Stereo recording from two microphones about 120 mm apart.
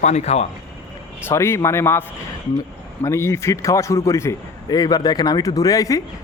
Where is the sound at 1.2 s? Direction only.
20° left (ahead or behind).